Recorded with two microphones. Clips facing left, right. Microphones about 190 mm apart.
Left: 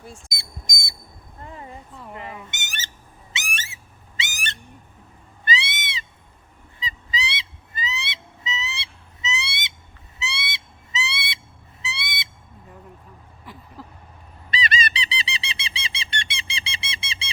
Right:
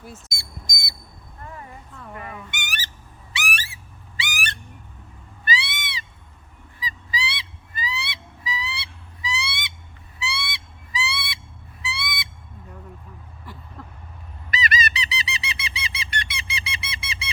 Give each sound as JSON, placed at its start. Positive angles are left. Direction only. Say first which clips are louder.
{"t": 0.3, "sound": "alarm", "louder": "even", "side_deg": 20}
{"t": 1.4, "sound": "a sound", "louder": "left 1 dB", "side_deg": 20}
{"t": 2.1, "sound": "goose", "louder": "right 1 dB", "side_deg": 20}
{"t": 3.3, "sound": "owl", "louder": "right 4 dB", "side_deg": 25}
{"t": 6.7, "sound": "honk", "louder": "even", "side_deg": 25}
{"t": 13.4, "sound": "vehicle", "louder": "left 1 dB", "side_deg": 0}
{"t": 14.5, "sound": "squeak", "louder": "even", "side_deg": 25}